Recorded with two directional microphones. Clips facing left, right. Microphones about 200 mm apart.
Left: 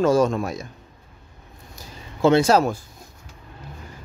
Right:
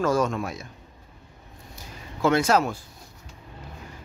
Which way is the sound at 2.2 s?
30° left (ahead or behind).